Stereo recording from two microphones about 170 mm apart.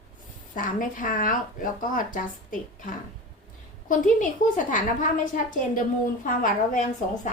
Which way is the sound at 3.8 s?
50° left (ahead or behind).